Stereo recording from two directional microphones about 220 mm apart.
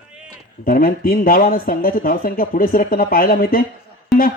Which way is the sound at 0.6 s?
40° left (ahead or behind).